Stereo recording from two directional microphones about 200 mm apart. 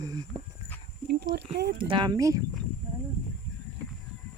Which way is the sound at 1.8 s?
25° right (ahead or behind).